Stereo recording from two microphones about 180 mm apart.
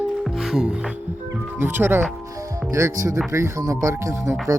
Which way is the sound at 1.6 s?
10° right (ahead or behind).